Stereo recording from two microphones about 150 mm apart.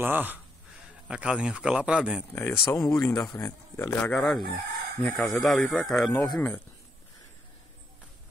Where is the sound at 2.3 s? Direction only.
15° left (ahead or behind).